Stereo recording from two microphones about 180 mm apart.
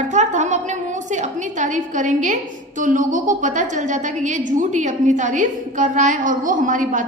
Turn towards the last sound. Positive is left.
turn(degrees=-45)  # may be behind; listen again after turning